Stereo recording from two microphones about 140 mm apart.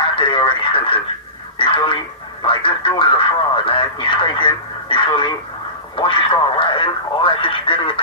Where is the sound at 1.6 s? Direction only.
35° left (ahead or behind).